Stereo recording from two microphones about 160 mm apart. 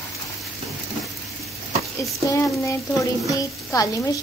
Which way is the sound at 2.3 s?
20° left (ahead or behind).